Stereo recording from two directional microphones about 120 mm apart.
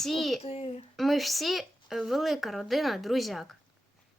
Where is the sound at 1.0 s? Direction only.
Centre (ahead or behind).